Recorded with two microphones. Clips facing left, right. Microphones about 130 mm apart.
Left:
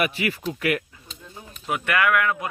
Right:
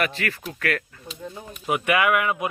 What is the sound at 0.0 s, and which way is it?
Speech, 10° left (ahead or behind).